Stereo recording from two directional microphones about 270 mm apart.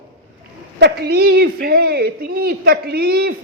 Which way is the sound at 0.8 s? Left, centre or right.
Right.